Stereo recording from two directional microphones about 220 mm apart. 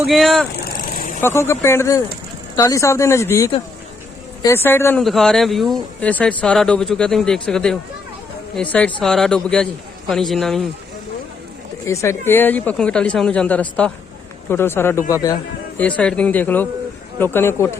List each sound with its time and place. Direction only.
0.0 s speech: centre (ahead or behind)
0.5 s vehicle: 40° left (ahead or behind)
1.2 s speech: 10° left (ahead or behind)
11.9 s speech: 15° left (ahead or behind)